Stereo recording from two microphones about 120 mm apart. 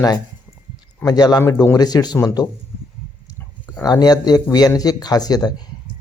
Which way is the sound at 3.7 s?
35° left (ahead or behind).